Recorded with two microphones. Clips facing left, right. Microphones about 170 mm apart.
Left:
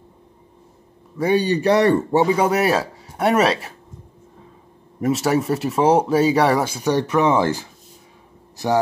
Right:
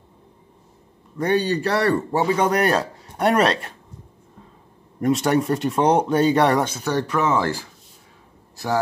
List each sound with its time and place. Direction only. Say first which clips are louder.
1.1 s a man's voice: left 2 dB; 10° left (ahead or behind)
2.3 s speech: left 1 dB; 5° left (ahead or behind)
5.0 s speech: even; 5° left (ahead or behind); by 8.7 s 20° left (ahead or behind)